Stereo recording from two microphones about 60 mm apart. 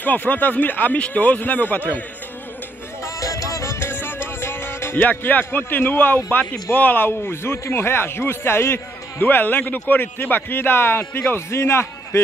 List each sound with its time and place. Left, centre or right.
0.0 s speech: left
3.2 s music: left
3.8 s music: left
5.2 s speech: left
11.5 s a man's voice: left